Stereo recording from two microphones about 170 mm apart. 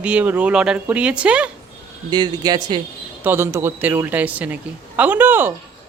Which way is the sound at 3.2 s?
15° right (ahead or behind).